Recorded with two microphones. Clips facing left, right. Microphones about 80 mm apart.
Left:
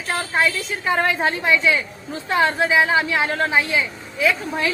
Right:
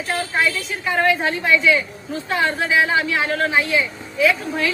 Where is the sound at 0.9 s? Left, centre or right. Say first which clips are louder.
Right 1 dB; left.